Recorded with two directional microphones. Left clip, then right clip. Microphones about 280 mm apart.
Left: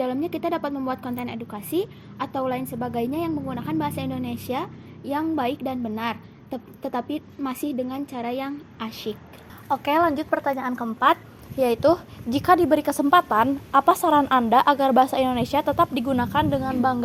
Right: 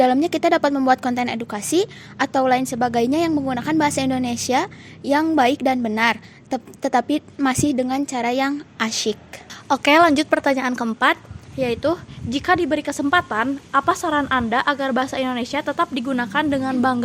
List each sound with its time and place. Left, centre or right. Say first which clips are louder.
0.0 s a woman's voice: right 9 dB; right
11.5 s a woman's voice: left 2 dB; centre; by 17.0 s right